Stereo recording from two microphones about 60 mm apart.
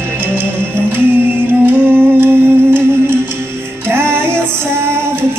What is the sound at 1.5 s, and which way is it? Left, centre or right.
Music, right.